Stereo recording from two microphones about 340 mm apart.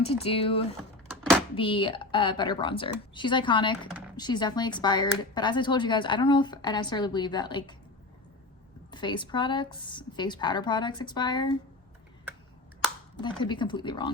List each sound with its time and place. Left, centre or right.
0.0 s speech: centre
8.9 s speech: centre
13.2 s speech: centre